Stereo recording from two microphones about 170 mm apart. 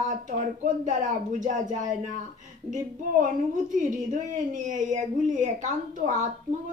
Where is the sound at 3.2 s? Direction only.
50° right (ahead or behind).